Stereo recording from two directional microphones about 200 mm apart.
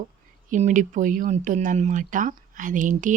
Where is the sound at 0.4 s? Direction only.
40° right (ahead or behind).